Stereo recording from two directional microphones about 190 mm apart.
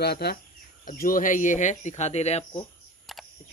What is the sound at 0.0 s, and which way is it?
Speech, 55° left (ahead or behind).